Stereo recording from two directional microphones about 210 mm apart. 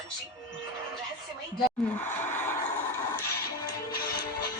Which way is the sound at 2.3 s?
10° left (ahead or behind).